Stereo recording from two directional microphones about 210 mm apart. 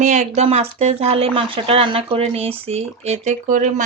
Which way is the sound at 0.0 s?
35° right (ahead or behind).